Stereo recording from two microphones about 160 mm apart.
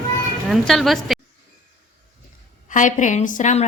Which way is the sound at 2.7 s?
50° left (ahead or behind).